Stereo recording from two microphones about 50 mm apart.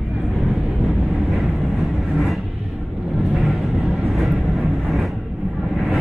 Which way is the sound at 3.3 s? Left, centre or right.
Centre.